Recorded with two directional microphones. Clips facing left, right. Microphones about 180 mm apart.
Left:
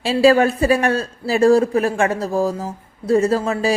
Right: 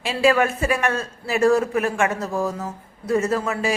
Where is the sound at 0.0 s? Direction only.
35° left (ahead or behind).